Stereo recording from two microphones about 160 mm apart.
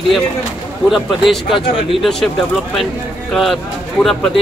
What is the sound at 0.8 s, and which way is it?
Speech, centre (ahead or behind).